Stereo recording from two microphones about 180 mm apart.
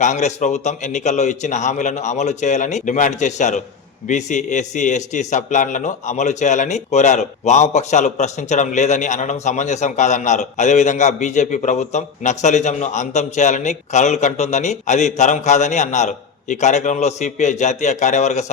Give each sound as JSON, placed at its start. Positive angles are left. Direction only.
{"t": 0.0, "sound": "a man's voice", "side_deg": 40}